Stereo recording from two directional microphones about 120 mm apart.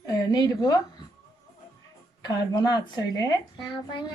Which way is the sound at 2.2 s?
35° left (ahead or behind).